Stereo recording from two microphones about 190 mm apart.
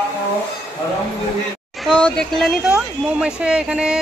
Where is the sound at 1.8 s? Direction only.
5° left (ahead or behind).